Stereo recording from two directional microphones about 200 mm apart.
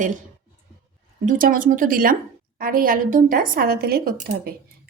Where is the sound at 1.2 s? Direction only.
45° right (ahead or behind).